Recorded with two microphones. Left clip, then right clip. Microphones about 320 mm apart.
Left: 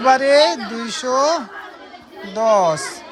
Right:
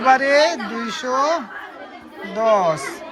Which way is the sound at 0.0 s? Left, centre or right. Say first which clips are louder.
Left 2 dB; centre.